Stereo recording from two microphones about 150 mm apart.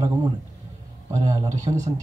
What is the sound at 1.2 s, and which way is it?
Speech, 20° right (ahead or behind).